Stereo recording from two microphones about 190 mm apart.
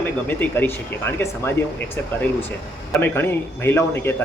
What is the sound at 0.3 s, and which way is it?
Speech, 10° left (ahead or behind).